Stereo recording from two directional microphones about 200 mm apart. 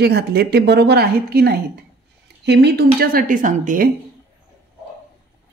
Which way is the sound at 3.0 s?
45° right (ahead or behind).